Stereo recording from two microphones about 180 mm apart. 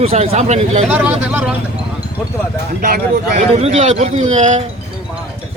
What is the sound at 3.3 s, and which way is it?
Speech, 35° right (ahead or behind).